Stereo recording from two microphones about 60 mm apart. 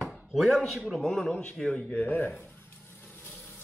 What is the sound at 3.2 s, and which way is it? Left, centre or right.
Vehicle, left.